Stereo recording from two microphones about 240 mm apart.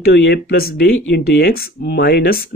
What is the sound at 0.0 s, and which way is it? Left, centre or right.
Speech, left.